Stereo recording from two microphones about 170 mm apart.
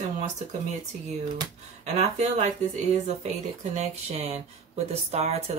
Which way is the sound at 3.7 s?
40° right (ahead or behind).